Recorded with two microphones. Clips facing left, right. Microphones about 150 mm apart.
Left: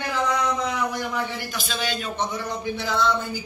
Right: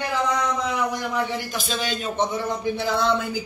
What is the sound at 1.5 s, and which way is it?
Speech, 25° right (ahead or behind).